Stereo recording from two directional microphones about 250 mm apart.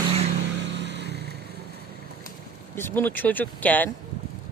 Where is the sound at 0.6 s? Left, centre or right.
Right.